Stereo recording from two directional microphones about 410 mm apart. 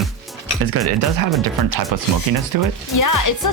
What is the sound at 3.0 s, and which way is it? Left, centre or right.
Speech, left.